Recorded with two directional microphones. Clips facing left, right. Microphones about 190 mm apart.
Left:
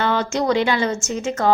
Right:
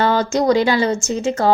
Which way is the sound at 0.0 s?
40° right (ahead or behind).